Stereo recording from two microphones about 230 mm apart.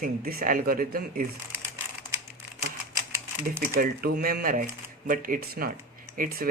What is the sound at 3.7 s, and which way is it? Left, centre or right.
Speech, right.